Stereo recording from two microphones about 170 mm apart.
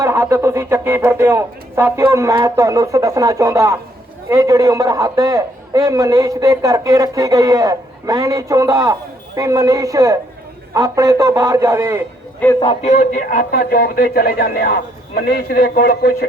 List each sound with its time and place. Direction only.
0.0 s a man's voice: 15° right (ahead or behind)
12.4 s a man's voice: 10° left (ahead or behind)
12.8 s speech: 40° left (ahead or behind); by 16.1 s 65° left (ahead or behind)